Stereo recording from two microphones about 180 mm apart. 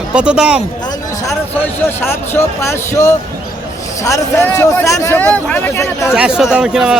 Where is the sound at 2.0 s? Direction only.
10° left (ahead or behind).